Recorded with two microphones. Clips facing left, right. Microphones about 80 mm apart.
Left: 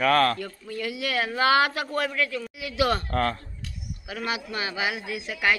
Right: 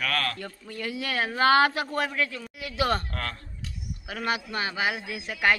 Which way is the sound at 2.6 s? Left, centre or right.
Right.